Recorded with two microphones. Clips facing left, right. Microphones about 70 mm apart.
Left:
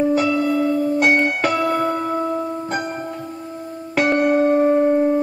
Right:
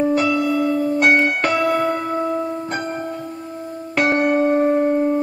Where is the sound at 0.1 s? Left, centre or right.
Centre.